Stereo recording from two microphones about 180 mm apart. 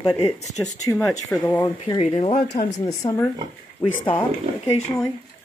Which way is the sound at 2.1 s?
30° left (ahead or behind).